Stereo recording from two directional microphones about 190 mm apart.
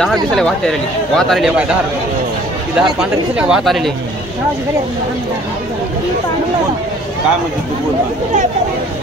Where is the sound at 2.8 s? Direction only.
5° right (ahead or behind).